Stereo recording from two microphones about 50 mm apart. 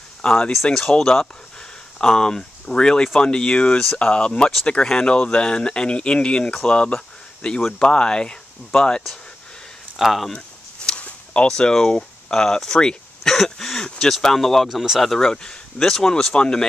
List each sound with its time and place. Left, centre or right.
0.2 s speech: centre
9.9 s speech: centre
10.3 s a sound: left
11.4 s speech: centre
15.1 s speech: centre